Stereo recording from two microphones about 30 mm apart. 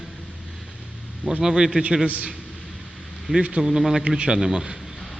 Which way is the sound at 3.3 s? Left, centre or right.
Right.